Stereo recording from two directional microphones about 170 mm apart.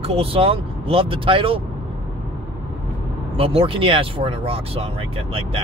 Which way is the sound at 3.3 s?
35° right (ahead or behind).